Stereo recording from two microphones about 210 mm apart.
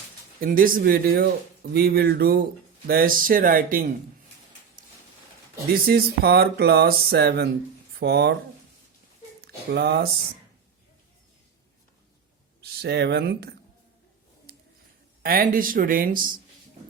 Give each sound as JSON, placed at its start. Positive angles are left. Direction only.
{"t": 0.3, "sound": "speech", "side_deg": -40}
{"t": 5.7, "sound": "speech", "side_deg": -45}
{"t": 9.6, "sound": "speech", "side_deg": -50}
{"t": 12.6, "sound": "speech", "side_deg": -50}
{"t": 15.2, "sound": "speech", "side_deg": -45}